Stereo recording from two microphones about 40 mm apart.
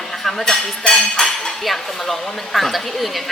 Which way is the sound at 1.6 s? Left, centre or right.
Centre.